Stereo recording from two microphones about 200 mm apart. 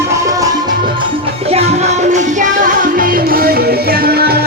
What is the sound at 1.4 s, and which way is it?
Music, 30° right (ahead or behind).